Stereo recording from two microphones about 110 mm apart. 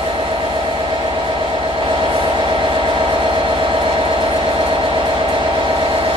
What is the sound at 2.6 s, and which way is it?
Train, 45° right (ahead or behind).